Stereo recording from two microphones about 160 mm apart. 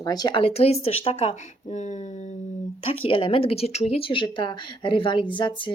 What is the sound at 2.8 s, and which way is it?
Speech, 35° left (ahead or behind).